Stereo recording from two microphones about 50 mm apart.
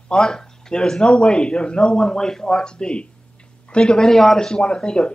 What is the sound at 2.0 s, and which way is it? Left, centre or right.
Speech, centre.